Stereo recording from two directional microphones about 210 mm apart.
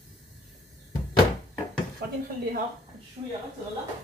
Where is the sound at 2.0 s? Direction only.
45° right (ahead or behind).